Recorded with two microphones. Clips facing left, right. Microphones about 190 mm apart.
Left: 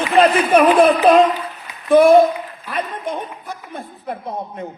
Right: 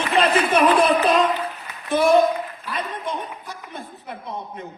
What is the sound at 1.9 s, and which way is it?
Speech, 55° left (ahead or behind).